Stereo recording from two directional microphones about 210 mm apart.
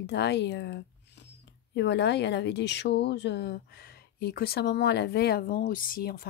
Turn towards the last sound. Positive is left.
turn(degrees=45)  # may be behind; listen again after turning